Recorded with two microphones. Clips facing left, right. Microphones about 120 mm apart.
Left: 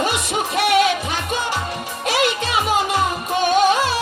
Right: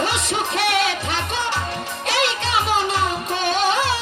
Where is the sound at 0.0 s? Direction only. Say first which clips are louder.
Left 1 dB; 15° left (ahead or behind).